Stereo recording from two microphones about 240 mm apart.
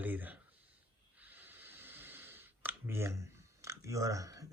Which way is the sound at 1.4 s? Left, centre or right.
Centre.